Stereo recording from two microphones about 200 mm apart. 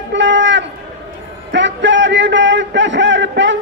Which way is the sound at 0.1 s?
65° right (ahead or behind).